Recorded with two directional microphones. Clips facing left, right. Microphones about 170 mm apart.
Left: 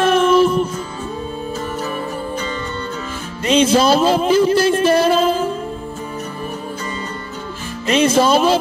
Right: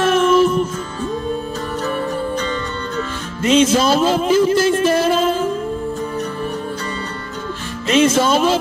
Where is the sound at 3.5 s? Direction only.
30° left (ahead or behind).